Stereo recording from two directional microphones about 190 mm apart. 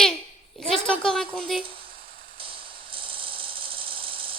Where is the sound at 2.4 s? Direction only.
30° right (ahead or behind).